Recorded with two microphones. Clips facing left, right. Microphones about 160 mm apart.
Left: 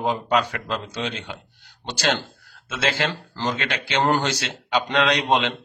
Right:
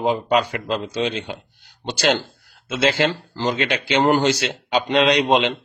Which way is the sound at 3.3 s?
10° right (ahead or behind).